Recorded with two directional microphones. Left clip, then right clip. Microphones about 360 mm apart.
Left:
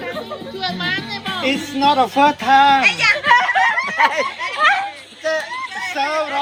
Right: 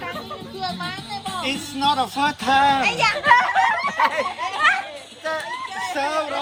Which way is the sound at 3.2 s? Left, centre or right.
Centre.